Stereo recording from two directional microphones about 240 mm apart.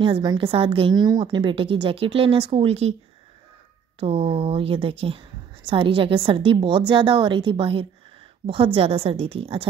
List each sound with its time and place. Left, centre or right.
0.0 s a woman's voice: centre
4.0 s a woman's voice: right